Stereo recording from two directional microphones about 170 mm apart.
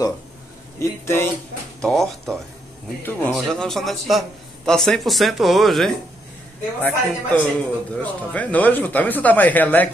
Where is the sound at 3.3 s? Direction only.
Centre (ahead or behind).